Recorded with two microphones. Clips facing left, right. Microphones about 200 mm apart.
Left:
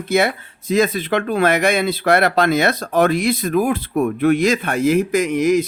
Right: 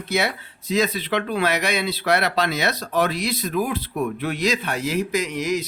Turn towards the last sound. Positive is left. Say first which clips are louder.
# left 8 dB
turn(degrees=50)  # may be behind; listen again after turning